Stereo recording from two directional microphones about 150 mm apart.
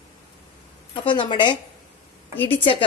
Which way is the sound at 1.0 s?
35° left (ahead or behind).